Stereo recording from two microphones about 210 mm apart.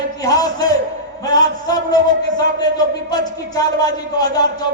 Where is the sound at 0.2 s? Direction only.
15° left (ahead or behind).